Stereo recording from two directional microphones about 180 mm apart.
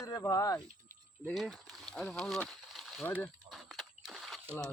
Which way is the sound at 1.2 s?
Centre (ahead or behind).